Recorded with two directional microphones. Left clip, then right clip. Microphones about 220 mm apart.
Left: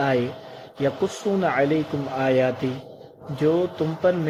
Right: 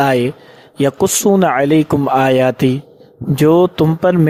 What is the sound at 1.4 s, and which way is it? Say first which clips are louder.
Speech: right 9 dB; 50° right (ahead or behind).